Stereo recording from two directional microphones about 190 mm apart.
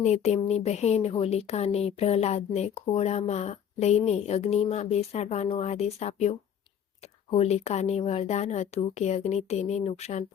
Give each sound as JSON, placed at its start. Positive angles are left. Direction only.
{"t": 0.0, "sound": "speech", "side_deg": 35}